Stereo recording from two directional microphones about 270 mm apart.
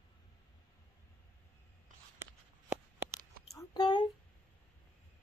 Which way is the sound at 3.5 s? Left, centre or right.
Centre.